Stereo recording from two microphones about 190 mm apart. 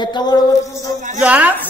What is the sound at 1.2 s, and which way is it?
Speech, 5° right (ahead or behind).